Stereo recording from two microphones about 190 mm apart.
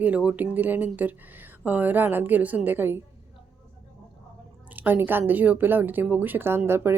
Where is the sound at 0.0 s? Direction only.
5° right (ahead or behind).